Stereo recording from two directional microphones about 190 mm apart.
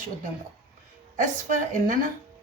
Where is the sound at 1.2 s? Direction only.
45° right (ahead or behind).